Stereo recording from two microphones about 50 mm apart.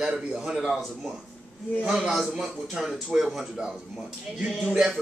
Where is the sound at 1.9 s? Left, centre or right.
Centre.